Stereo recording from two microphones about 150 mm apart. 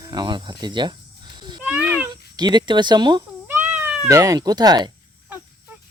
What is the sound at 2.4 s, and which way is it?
Speech, 30° right (ahead or behind).